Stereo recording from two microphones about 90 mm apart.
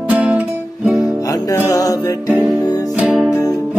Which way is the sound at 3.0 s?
15° right (ahead or behind).